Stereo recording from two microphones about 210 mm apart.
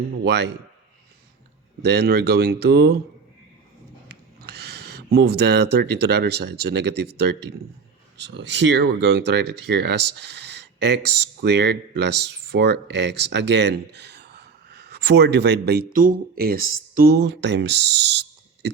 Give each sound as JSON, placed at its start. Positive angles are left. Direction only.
{"t": 0.3, "sound": "a man's voice", "side_deg": -55}
{"t": 1.8, "sound": "speech", "side_deg": -50}
{"t": 4.1, "sound": "speech", "side_deg": -50}